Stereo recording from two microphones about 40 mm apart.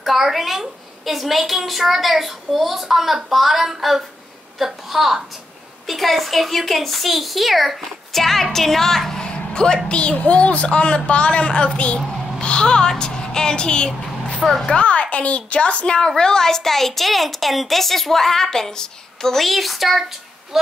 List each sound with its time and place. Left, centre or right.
0.0 s a woman's voice: centre
9.3 s a sound: left
9.8 s a woman's voice: left
12.4 s a sound: left
14.4 s a woman's voice: centre
14.7 s a woman's voice: left; by 20.1 s centre